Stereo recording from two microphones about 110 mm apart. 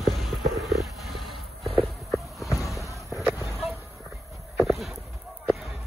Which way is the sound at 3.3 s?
25° right (ahead or behind).